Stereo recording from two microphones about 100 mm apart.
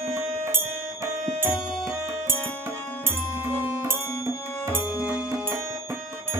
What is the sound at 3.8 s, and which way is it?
Music, 25° right (ahead or behind).